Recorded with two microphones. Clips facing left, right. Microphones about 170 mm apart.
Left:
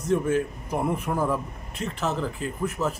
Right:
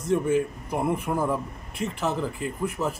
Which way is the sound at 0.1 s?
5° right (ahead or behind).